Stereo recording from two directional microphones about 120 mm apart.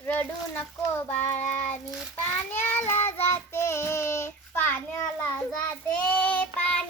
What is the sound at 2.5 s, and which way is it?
Child singing, 15° left (ahead or behind).